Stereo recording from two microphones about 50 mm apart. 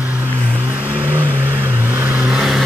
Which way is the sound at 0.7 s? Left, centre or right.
Right.